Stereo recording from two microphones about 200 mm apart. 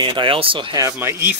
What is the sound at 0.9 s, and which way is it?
Speech, 10° right (ahead or behind).